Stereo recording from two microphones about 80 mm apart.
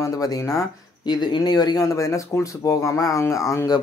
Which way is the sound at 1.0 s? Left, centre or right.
Left.